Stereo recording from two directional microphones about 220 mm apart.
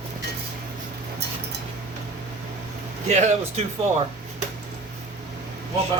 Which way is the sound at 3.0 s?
30° right (ahead or behind).